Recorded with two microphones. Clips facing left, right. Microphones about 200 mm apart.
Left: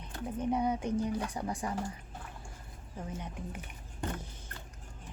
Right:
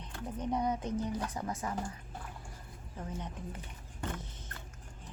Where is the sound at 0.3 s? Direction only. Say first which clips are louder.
Left 2 dB; 10° left (ahead or behind).